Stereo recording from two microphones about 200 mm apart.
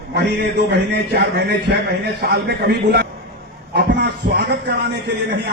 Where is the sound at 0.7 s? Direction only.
55° right (ahead or behind).